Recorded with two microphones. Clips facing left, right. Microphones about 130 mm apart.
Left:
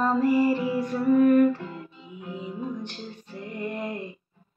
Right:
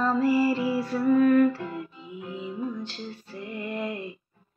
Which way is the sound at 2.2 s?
15° left (ahead or behind).